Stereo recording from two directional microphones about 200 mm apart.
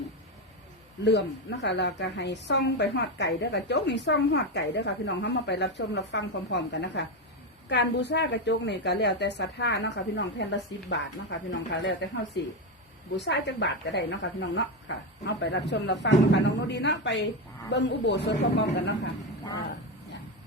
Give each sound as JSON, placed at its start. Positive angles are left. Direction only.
{"t": 1.0, "sound": "a woman's voice", "side_deg": 60}
{"t": 13.1, "sound": "a woman's voice", "side_deg": 60}